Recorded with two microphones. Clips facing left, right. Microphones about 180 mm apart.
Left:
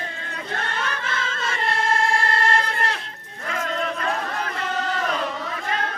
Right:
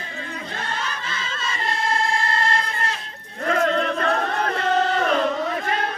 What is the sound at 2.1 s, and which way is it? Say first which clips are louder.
Music: left 1 dB; 55° left (ahead or behind).